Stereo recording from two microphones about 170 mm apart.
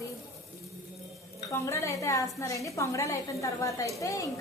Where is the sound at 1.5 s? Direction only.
15° left (ahead or behind).